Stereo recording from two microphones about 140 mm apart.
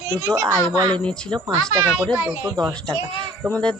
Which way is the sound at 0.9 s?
5° left (ahead or behind).